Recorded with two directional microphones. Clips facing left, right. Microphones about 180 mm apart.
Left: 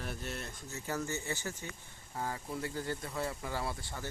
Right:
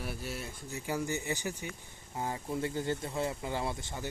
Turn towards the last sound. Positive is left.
turn(degrees=-20)  # may be behind; listen again after turning